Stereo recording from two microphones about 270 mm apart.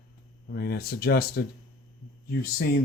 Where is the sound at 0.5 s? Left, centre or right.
Left.